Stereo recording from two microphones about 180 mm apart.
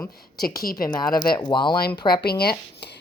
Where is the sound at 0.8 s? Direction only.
20° left (ahead or behind).